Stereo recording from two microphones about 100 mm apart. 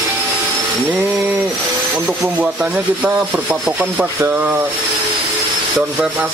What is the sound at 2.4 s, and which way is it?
Speech, 15° right (ahead or behind).